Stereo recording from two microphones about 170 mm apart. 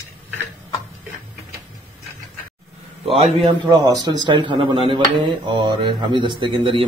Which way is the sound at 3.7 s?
20° right (ahead or behind).